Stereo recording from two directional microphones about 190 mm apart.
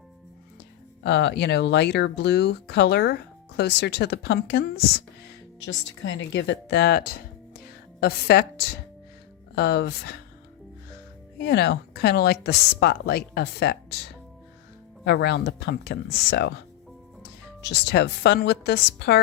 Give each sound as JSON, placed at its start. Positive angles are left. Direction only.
{"t": 1.0, "sound": "speech", "side_deg": 65}
{"t": 5.5, "sound": "speech", "side_deg": 70}
{"t": 11.4, "sound": "speech", "side_deg": 60}
{"t": 15.0, "sound": "speech", "side_deg": 60}